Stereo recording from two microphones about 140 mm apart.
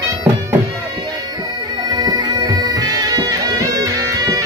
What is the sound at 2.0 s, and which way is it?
Bagpipes, 30° right (ahead or behind).